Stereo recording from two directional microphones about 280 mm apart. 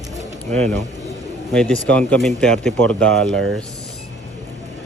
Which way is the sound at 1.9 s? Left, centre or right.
Centre.